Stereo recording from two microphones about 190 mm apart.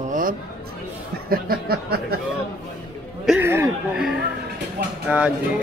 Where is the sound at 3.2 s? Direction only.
10° right (ahead or behind).